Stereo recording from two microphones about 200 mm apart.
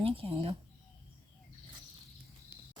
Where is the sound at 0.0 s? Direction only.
30° right (ahead or behind).